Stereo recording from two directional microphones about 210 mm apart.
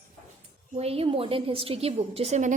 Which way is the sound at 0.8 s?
25° right (ahead or behind).